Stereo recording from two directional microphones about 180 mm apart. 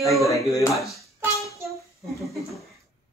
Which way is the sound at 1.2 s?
15° right (ahead or behind).